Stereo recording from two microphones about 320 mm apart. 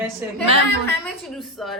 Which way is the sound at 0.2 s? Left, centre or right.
Centre.